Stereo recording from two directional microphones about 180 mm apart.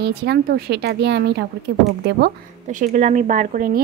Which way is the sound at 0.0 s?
65° right (ahead or behind).